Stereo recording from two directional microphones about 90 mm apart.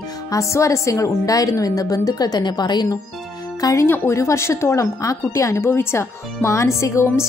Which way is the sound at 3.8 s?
30° left (ahead or behind).